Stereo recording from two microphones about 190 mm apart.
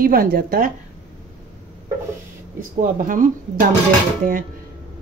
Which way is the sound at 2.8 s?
45° right (ahead or behind).